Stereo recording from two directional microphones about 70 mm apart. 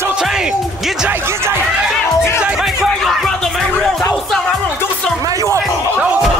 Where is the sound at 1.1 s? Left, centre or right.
Right.